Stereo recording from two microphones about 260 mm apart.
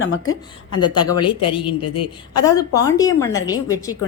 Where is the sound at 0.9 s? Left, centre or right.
Centre.